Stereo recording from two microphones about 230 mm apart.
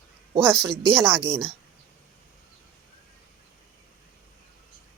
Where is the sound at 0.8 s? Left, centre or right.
Centre.